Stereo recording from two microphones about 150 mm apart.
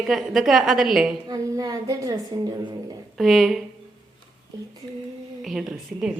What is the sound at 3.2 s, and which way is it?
Speech, centre (ahead or behind).